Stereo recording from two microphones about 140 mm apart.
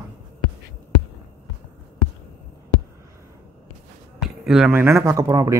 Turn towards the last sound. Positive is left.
turn(degrees=-25)  # may be behind; listen again after turning